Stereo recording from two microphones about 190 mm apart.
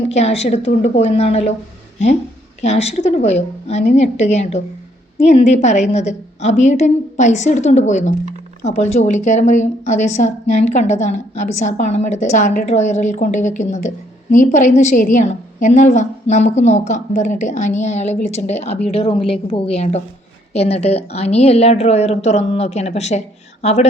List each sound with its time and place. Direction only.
0.1 s a woman's voice: 35° left (ahead or behind)
2.6 s a woman's voice: 35° left (ahead or behind)